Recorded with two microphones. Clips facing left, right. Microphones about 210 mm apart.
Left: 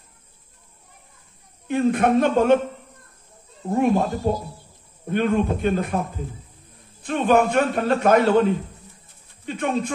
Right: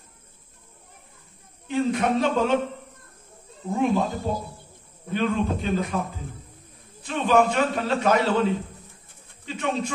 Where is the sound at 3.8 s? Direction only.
55° left (ahead or behind).